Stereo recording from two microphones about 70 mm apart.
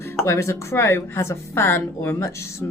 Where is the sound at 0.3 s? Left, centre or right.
Left.